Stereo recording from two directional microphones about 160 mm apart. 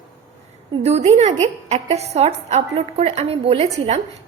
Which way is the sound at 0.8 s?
45° right (ahead or behind).